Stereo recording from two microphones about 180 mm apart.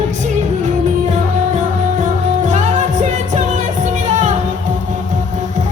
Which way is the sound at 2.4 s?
40° right (ahead or behind).